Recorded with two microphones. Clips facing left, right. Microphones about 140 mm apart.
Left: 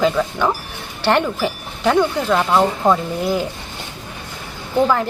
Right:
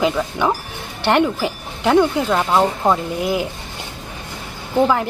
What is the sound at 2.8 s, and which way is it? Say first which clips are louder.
Speech: left 1 dB; 15° right (ahead or behind).